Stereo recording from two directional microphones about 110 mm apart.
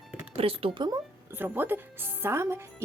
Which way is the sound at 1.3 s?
20° right (ahead or behind).